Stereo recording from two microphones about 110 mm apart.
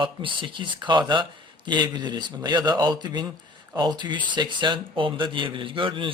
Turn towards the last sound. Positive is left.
turn(degrees=-50)  # may be behind; listen again after turning